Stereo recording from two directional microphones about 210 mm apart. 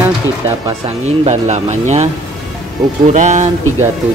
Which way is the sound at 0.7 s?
30° right (ahead or behind).